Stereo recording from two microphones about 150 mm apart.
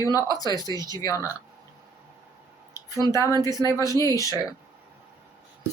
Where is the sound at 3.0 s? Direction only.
20° left (ahead or behind).